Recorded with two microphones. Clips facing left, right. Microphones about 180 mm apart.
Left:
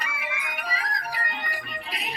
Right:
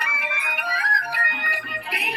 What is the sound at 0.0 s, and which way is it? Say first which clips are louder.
Music: right 3 dB; 65° right (ahead or behind).